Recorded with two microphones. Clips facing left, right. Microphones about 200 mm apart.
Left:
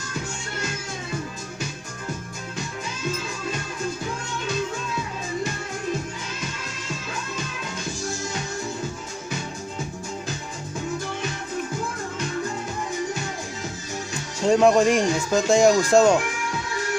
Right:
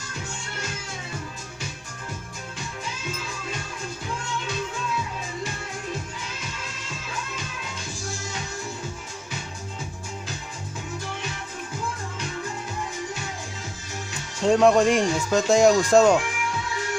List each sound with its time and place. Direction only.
14.4 s speech: centre (ahead or behind)